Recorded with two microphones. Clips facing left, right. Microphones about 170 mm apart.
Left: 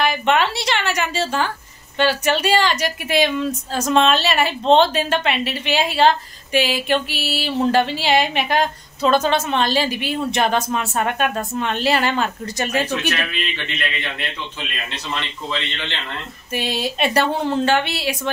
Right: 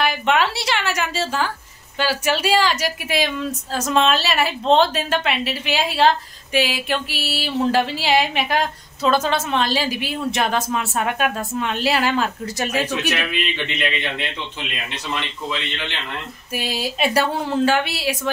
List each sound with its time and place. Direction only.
0.0 s a sound: centre (ahead or behind)
2.0 s a woman's voice: 5° right (ahead or behind)
13.3 s a man's voice: 20° right (ahead or behind)
16.5 s a woman's voice: 5° right (ahead or behind)